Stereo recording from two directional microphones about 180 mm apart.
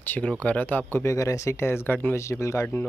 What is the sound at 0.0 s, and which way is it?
Speech, 10° left (ahead or behind).